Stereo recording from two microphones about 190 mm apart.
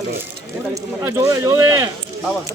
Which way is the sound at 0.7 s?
15° right (ahead or behind).